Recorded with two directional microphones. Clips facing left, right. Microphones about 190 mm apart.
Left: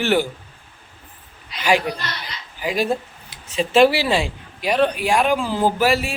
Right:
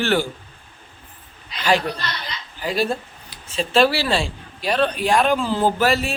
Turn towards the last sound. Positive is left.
turn(degrees=10)  # may be behind; listen again after turning